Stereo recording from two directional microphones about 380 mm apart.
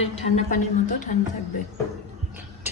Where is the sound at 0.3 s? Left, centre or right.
Centre.